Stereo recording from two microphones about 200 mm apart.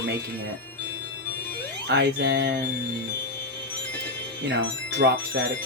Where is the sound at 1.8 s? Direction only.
60° right (ahead or behind).